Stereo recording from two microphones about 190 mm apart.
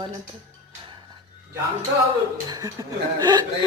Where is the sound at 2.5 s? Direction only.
20° right (ahead or behind).